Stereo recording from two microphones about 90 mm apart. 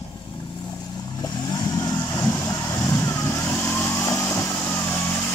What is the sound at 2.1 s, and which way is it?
Vehicle, 35° left (ahead or behind).